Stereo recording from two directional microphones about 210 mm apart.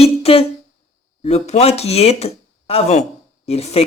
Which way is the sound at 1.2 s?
30° left (ahead or behind).